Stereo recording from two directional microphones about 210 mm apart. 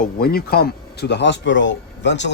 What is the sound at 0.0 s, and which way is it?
A man's voice, 45° left (ahead or behind).